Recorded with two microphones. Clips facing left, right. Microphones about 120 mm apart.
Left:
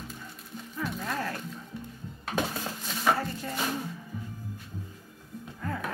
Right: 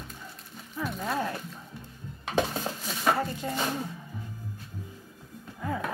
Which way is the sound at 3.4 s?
20° right (ahead or behind).